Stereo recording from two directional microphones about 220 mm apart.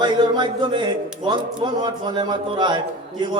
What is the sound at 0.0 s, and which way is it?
A man's voice, 20° right (ahead or behind).